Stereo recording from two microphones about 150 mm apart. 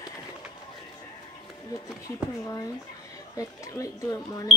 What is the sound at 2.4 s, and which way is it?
Speech, 25° left (ahead or behind).